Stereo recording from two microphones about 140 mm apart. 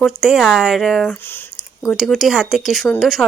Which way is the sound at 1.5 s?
Centre (ahead or behind).